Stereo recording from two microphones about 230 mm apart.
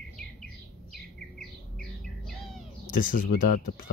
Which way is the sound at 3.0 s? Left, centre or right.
Left.